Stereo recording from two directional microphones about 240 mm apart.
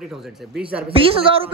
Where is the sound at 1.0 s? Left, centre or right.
Right.